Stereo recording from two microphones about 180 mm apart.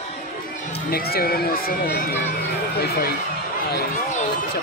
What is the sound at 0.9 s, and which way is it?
Speech, 55° left (ahead or behind).